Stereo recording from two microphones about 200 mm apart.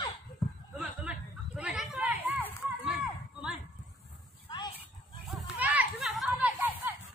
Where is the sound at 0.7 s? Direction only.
5° right (ahead or behind).